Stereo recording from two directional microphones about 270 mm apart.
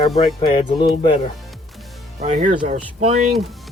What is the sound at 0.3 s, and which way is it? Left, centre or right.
Speech, centre.